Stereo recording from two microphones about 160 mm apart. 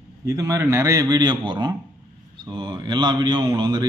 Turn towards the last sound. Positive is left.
turn(degrees=-25)  # may be behind; listen again after turning